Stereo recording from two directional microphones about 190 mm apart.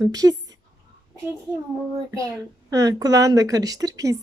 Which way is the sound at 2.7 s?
20° right (ahead or behind).